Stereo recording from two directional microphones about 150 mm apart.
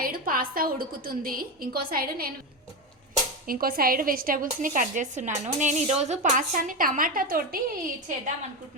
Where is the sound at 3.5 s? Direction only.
75° right (ahead or behind).